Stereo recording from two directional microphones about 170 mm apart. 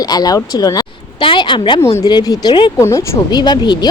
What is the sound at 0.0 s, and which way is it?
A woman's voice, 20° left (ahead or behind).